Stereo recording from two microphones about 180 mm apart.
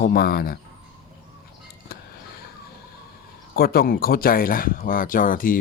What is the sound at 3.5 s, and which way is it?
Speech, 55° left (ahead or behind).